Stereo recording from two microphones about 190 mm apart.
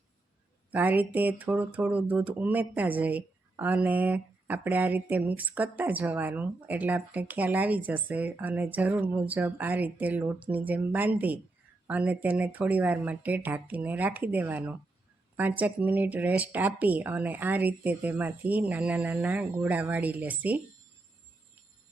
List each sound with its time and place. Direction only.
0.7 s speech: 10° right (ahead or behind)